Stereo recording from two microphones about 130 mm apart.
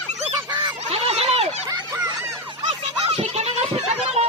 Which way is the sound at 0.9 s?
55° right (ahead or behind).